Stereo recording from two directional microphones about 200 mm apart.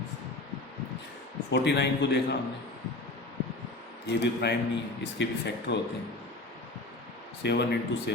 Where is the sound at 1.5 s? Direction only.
60° left (ahead or behind).